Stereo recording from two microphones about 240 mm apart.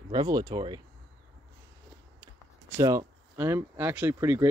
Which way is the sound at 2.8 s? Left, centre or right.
Centre.